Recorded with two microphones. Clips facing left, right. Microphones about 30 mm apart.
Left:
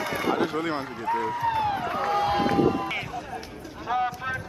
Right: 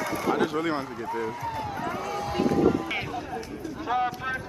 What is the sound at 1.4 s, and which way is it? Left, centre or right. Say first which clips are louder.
Run: left 6 dB; left.